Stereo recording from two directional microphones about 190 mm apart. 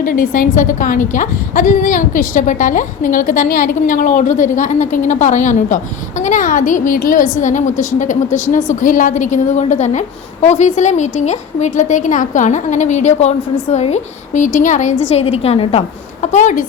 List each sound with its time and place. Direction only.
0.0 s a woman's voice: 45° left (ahead or behind)